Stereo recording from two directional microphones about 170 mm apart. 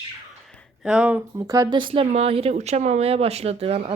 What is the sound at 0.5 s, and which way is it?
Speech, 5° right (ahead or behind).